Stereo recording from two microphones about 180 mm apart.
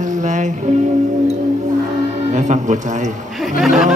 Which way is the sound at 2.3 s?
40° right (ahead or behind).